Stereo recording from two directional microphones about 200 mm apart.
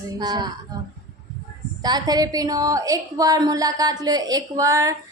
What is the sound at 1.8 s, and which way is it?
A woman's voice, 20° right (ahead or behind).